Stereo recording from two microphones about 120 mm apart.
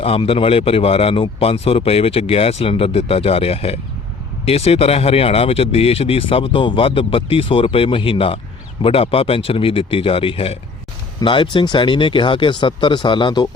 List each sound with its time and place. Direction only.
0.0 s speech: 55° left (ahead or behind)